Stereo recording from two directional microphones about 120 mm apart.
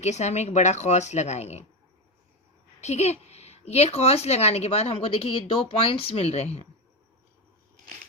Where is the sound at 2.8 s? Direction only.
70° left (ahead or behind).